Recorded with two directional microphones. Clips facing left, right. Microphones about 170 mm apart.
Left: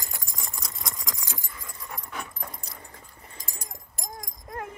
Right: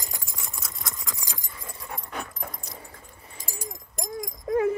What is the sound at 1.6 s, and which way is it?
Dog, 30° right (ahead or behind).